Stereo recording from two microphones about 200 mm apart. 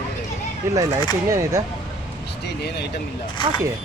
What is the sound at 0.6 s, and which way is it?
Speech, 15° right (ahead or behind).